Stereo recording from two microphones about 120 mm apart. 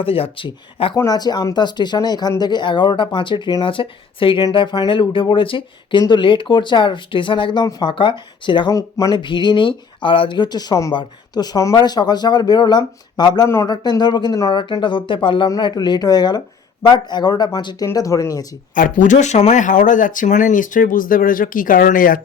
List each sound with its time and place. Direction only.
0.0 s speech: 50° left (ahead or behind)
0.9 s speech: 30° left (ahead or behind)
8.7 s speech: 30° left (ahead or behind)
9.2 s speech: 40° left (ahead or behind)
13.5 s speech: 25° left (ahead or behind)
13.8 s speech: 35° left (ahead or behind)
18.7 s speech: 90° left